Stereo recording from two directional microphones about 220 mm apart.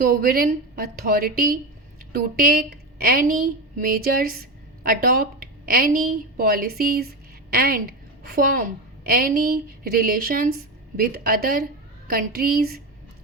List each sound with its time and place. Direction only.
0.0 s a woman's voice: 40° right (ahead or behind)